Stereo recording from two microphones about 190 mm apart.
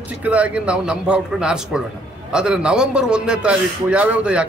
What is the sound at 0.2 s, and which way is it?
A man's voice, 5° right (ahead or behind).